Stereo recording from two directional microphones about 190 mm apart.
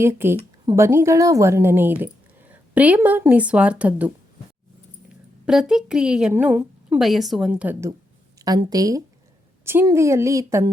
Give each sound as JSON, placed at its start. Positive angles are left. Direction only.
{"t": 0.0, "sound": "a woman's voice", "side_deg": -10}
{"t": 5.5, "sound": "a woman's voice", "side_deg": -5}